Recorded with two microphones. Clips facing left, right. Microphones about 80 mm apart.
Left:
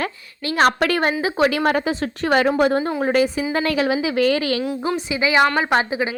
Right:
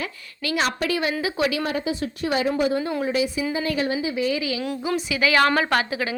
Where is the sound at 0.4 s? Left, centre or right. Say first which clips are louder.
Left 7 dB; left.